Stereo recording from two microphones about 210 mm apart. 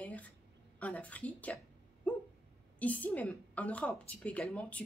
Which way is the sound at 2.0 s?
5° left (ahead or behind).